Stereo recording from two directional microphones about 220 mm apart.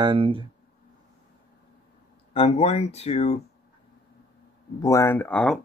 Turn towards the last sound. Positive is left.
turn(degrees=5)  # may be behind; listen again after turning